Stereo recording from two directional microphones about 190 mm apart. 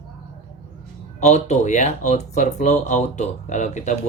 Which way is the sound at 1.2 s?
35° left (ahead or behind).